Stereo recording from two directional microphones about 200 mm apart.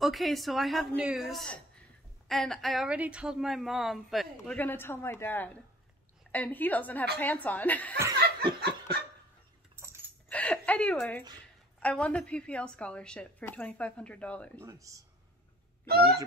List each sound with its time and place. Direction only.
0.0 s a woman's voice: centre (ahead or behind)
8.5 s laughter: 55° right (ahead or behind)
10.3 s a woman's voice: 5° left (ahead or behind)
14.6 s speech: 15° right (ahead or behind)
15.9 s a sound: 50° right (ahead or behind)